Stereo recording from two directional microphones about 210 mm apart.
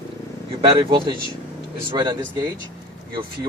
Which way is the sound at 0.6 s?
25° right (ahead or behind).